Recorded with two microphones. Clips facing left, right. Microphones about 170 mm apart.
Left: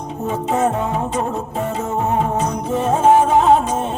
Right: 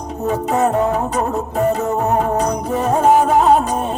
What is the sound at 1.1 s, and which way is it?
Music, 40° right (ahead or behind).